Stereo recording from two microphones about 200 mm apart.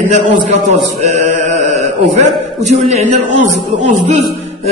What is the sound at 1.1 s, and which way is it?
Chant, 35° right (ahead or behind).